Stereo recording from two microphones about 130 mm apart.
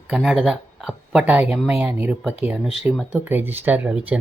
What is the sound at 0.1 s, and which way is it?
A woman's voice, 5° right (ahead or behind).